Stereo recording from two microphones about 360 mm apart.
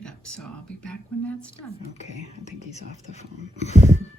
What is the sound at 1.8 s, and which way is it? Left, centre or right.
Speech, centre.